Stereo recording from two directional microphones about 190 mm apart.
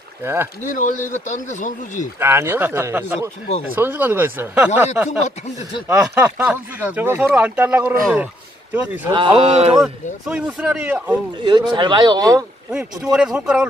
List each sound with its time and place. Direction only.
0.2 s speech: 10° right (ahead or behind)
0.7 s speech: 40° left (ahead or behind)
2.1 s speech: 10° right (ahead or behind)
9.1 s speech: 30° right (ahead or behind)
10.2 s speech: 5° right (ahead or behind)
11.4 s a man's voice: 25° right (ahead or behind)
12.7 s speech: centre (ahead or behind)